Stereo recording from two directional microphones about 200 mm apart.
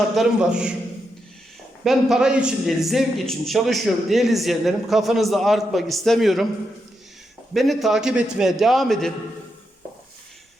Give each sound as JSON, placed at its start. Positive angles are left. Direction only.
{"t": 0.1, "sound": "a man's voice", "side_deg": 0}
{"t": 1.8, "sound": "a man's voice", "side_deg": 0}
{"t": 7.5, "sound": "a man's voice", "side_deg": 0}